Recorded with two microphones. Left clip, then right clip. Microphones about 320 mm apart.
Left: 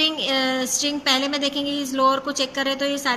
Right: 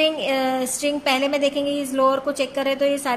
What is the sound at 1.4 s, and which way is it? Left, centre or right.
Speech, right.